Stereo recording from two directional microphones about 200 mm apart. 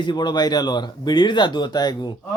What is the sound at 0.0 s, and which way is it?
Speech, 20° left (ahead or behind).